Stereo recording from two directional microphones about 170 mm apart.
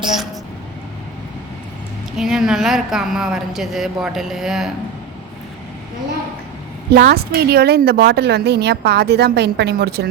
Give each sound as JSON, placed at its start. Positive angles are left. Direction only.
{"t": 0.0, "sound": "a woman's voice", "side_deg": 0}
{"t": 2.1, "sound": "a woman's voice", "side_deg": 0}
{"t": 6.9, "sound": "a woman's voice", "side_deg": -65}